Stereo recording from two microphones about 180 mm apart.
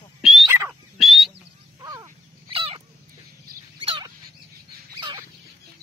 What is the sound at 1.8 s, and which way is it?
Crow, 15° right (ahead or behind).